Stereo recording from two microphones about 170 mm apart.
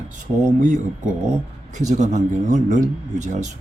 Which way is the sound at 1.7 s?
45° right (ahead or behind).